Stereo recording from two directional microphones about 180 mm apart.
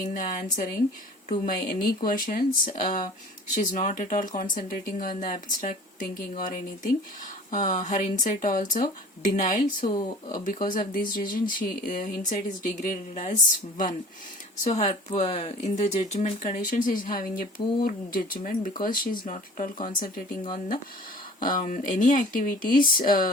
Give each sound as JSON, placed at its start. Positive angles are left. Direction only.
{"t": 0.1, "sound": "speech", "side_deg": 45}
{"t": 9.9, "sound": "speech", "side_deg": 25}
{"t": 10.3, "sound": "speech", "side_deg": 50}
{"t": 21.4, "sound": "speech", "side_deg": 50}